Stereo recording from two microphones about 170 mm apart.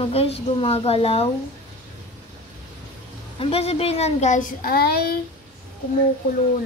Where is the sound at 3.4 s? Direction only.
35° left (ahead or behind); by 5.1 s 65° left (ahead or behind).